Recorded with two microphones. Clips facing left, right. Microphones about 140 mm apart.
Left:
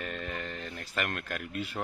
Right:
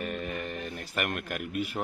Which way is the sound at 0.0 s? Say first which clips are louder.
Right 3 dB; 10° right (ahead or behind).